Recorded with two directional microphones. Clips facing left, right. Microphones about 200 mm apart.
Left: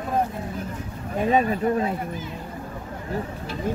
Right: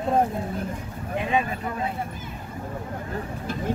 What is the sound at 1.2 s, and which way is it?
Speech, 40° left (ahead or behind).